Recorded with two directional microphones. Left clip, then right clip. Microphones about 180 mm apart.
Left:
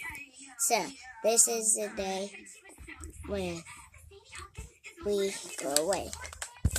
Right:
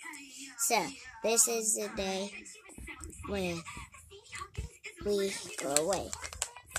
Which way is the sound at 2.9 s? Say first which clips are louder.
Left 1 dB; centre (ahead or behind).